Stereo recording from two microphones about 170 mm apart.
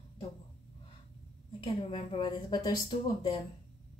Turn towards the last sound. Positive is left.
turn(degrees=25)  # may be behind; listen again after turning